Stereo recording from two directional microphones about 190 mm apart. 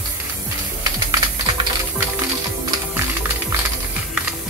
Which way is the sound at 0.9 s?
20° right (ahead or behind).